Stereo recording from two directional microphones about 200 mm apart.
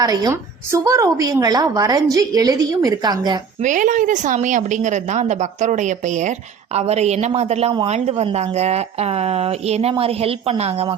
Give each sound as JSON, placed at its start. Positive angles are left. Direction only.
{"t": 0.0, "sound": "a woman's voice", "side_deg": -20}
{"t": 3.6, "sound": "a woman's voice", "side_deg": -40}